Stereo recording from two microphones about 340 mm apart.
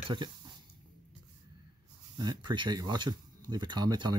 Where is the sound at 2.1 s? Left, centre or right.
Centre.